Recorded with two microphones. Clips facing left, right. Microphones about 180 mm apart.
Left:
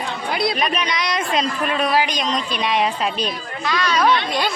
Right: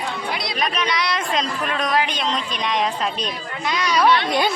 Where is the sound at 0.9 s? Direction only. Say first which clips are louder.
Left 1 dB; 20° left (ahead or behind).